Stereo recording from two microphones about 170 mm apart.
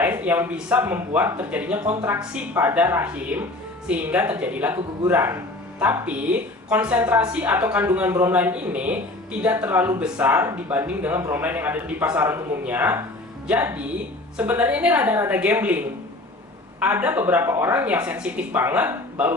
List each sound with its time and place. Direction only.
0.0 s a woman's voice: 10° right (ahead or behind)
16.8 s a woman's voice: 10° right (ahead or behind)